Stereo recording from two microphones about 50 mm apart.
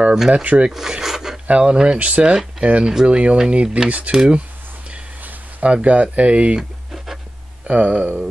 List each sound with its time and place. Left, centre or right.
0.3 s speech: right
0.7 s filing: centre
1.5 s speech: right
3.3 s filing: centre
5.2 s speech: right
7.6 s speech: right